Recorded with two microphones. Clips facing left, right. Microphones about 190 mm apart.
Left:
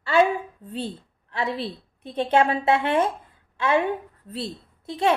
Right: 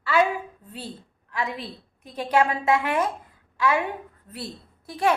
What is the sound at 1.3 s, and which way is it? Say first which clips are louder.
A woman's voice: left 3 dB; 30° left (ahead or behind).